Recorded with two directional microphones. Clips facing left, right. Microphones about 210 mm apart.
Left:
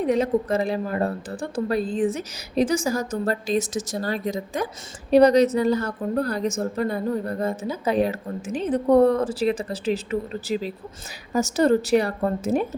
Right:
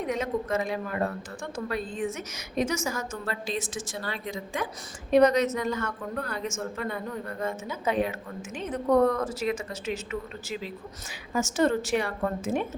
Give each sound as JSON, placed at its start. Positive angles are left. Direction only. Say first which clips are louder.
{"t": 0.0, "sound": "speech", "louder": "left 8 dB", "side_deg": 35}